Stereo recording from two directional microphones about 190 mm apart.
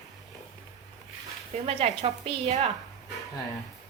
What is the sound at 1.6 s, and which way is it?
A woman's voice, 30° right (ahead or behind).